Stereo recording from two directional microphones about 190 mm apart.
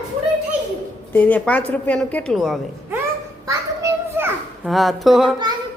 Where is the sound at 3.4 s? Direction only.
15° right (ahead or behind).